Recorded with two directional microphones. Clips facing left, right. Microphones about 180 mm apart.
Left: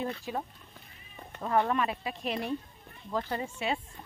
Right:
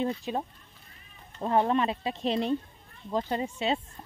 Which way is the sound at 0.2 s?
20° right (ahead or behind).